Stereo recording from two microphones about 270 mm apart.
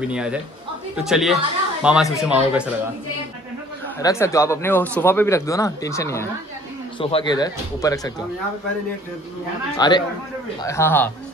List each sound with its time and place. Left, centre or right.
0.0 s a woman's voice: centre
4.0 s speech: centre
9.8 s speech: centre